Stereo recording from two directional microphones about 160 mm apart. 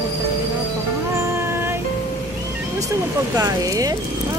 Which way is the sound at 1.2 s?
15° right (ahead or behind).